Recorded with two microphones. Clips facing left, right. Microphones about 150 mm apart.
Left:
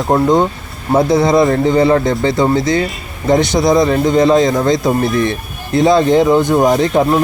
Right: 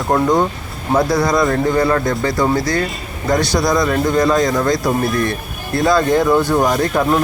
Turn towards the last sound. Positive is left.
turn(degrees=20)  # may be behind; listen again after turning